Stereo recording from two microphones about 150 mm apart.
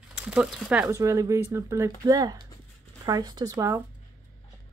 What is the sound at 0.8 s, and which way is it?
Speech, 20° right (ahead or behind).